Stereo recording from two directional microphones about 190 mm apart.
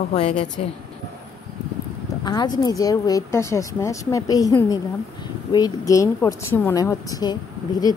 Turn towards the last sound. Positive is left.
turn(degrees=20)  # may be behind; listen again after turning